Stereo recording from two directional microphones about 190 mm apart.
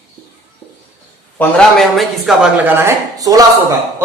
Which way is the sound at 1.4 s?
5° left (ahead or behind).